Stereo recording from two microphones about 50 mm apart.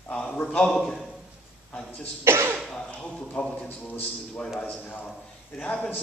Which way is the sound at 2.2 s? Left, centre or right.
Right.